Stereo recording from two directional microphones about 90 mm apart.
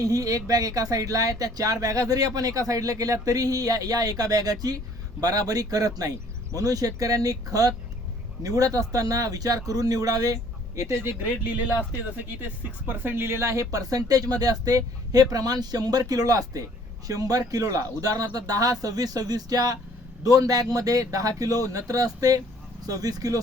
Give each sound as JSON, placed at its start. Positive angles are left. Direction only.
{"t": 0.0, "sound": "speech", "side_deg": -40}
{"t": 11.9, "sound": "speech", "side_deg": -20}